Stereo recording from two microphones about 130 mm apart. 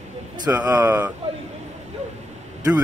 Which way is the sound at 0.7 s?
25° right (ahead or behind).